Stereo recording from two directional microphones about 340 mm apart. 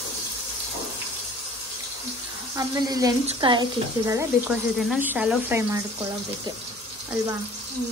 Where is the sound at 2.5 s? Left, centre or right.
Centre.